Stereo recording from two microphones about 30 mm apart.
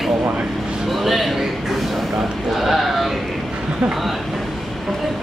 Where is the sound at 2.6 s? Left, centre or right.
Centre.